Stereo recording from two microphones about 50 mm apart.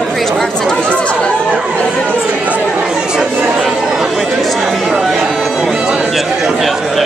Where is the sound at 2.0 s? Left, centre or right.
Right.